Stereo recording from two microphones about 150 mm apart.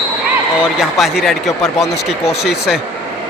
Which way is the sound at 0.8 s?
Centre (ahead or behind).